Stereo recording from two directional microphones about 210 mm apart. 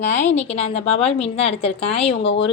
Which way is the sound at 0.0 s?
35° left (ahead or behind).